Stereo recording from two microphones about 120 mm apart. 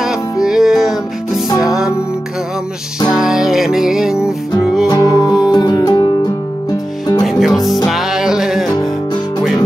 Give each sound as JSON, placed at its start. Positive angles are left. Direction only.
{"t": 0.0, "sound": "music", "side_deg": -5}
{"t": 3.1, "sound": "music", "side_deg": -5}
{"t": 4.8, "sound": "music", "side_deg": 30}
{"t": 7.2, "sound": "music", "side_deg": 0}